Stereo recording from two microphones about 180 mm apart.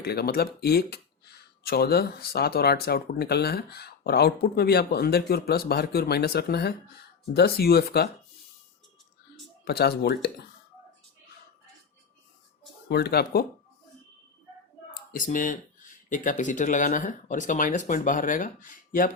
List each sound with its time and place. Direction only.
0.0 s speech: 65° left (ahead or behind)
9.6 s speech: 60° left (ahead or behind)
12.9 s speech: 60° left (ahead or behind)
15.1 s speech: 45° left (ahead or behind)